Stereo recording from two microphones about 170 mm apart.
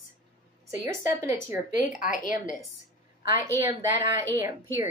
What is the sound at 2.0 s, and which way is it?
Speech, 50° left (ahead or behind).